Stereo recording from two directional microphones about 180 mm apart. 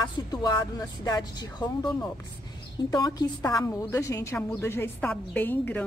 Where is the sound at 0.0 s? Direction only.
25° left (ahead or behind).